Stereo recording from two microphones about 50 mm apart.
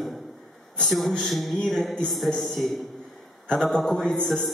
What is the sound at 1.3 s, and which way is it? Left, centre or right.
A man's voice, centre.